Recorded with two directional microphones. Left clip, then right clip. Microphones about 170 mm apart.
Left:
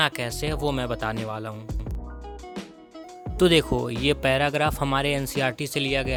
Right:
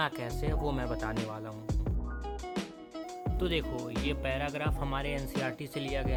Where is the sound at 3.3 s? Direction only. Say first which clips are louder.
Left 14 dB; 50° left (ahead or behind).